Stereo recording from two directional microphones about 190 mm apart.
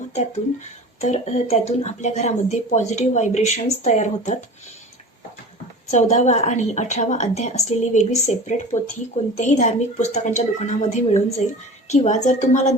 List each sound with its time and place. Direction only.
1.0 s a woman's voice: 35° left (ahead or behind)
5.9 s a woman's voice: 35° left (ahead or behind)